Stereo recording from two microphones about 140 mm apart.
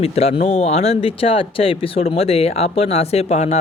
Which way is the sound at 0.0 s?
45° left (ahead or behind).